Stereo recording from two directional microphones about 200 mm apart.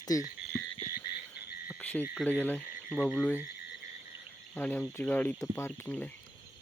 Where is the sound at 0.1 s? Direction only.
15° left (ahead or behind).